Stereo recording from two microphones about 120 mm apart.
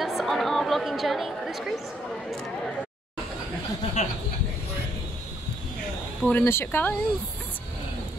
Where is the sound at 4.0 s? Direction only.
70° left (ahead or behind).